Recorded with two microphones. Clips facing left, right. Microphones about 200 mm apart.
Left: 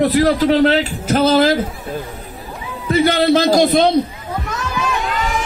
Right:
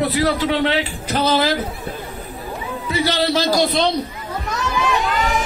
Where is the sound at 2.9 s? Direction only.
50° left (ahead or behind).